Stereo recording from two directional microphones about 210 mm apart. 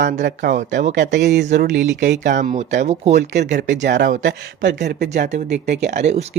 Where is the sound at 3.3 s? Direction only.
55° right (ahead or behind).